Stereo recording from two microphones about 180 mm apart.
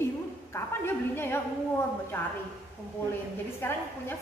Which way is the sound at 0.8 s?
10° left (ahead or behind).